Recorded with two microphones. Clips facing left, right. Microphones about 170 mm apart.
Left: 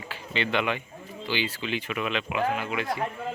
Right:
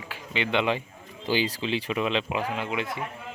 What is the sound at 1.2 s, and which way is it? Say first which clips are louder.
Speech: right 4 dB; 35° right (ahead or behind).